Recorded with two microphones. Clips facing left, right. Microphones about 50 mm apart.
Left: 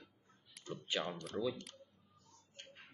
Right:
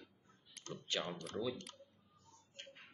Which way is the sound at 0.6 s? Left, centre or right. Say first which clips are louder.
Left 3 dB; right.